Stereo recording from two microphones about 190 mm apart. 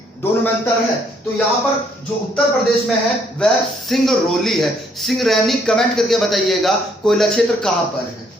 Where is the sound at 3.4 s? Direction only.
Centre (ahead or behind).